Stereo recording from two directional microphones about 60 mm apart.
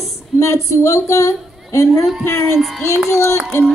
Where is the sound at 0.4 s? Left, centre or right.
Left.